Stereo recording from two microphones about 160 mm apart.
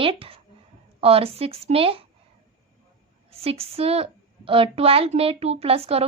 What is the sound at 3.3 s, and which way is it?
A woman's voice, 40° right (ahead or behind).